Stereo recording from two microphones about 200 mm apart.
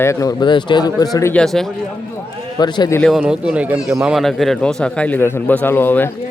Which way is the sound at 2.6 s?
20° left (ahead or behind).